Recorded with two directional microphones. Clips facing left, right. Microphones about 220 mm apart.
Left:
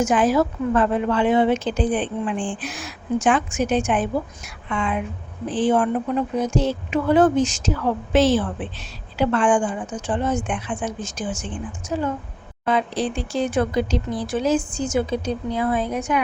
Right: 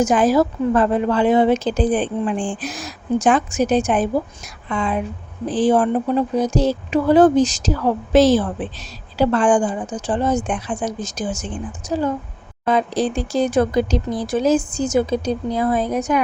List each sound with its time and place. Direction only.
0.0 s speech: 40° right (ahead or behind)